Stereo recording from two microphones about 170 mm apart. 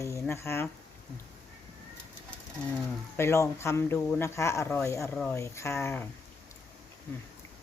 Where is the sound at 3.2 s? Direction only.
15° left (ahead or behind).